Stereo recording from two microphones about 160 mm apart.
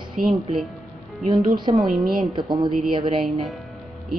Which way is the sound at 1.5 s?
30° right (ahead or behind).